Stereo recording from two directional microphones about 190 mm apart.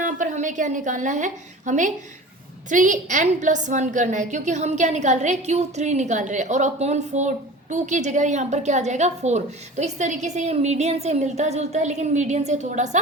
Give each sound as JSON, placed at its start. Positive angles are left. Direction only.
{"t": 0.0, "sound": "a woman's voice", "side_deg": -40}